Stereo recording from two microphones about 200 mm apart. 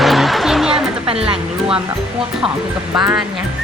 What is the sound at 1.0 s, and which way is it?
Speech, 30° right (ahead or behind).